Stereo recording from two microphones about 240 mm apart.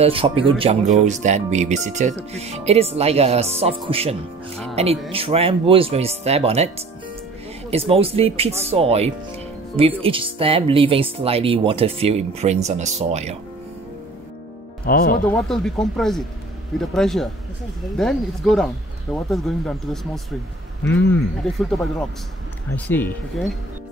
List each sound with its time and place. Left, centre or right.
0.0 s speech: right
7.7 s speech: right
14.9 s speech: left
15.2 s speech: centre